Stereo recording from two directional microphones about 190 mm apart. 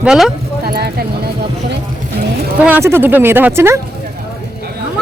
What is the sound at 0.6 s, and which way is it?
Clip-clop, 55° right (ahead or behind).